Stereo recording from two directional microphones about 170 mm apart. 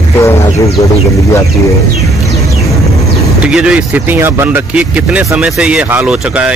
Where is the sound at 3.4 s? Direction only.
5° right (ahead or behind).